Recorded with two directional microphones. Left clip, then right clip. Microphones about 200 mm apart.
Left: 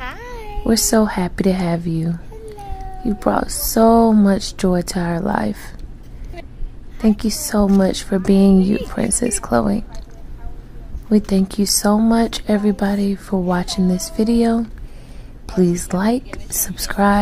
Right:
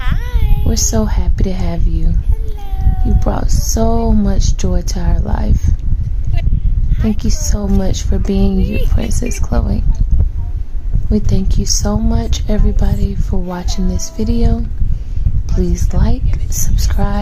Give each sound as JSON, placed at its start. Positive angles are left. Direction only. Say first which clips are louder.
{"t": 0.0, "sound": "music", "louder": "right 2 dB", "side_deg": 0}
{"t": 0.7, "sound": "speech", "louder": "left 3 dB", "side_deg": 15}
{"t": 7.2, "sound": "speech", "louder": "left 4 dB", "side_deg": 15}
{"t": 11.1, "sound": "speech", "louder": "left 2 dB", "side_deg": 15}